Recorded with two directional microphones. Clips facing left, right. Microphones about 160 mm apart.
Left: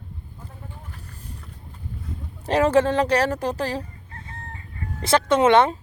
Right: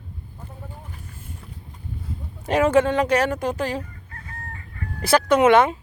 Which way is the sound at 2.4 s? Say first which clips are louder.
Even; 35° left (ahead or behind).